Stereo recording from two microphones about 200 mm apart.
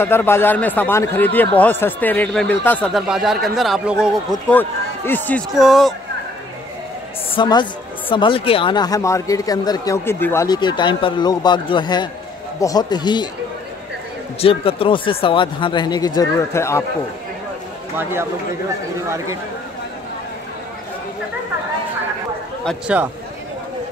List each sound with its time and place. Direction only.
0.0 s speech: 10° left (ahead or behind); by 4.4 s 5° right (ahead or behind)
4.5 s speech: 10° left (ahead or behind)
7.3 s speech: 20° left (ahead or behind)
14.4 s speech: 30° left (ahead or behind)
22.7 s speech: 5° right (ahead or behind)